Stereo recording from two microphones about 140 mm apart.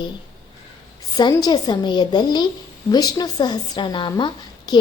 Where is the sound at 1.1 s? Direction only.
30° left (ahead or behind).